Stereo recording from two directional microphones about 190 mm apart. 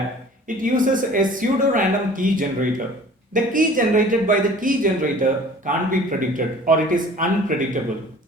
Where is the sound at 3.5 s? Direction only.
45° right (ahead or behind).